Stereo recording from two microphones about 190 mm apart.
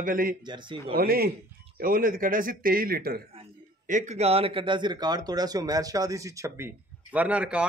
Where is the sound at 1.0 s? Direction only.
50° right (ahead or behind).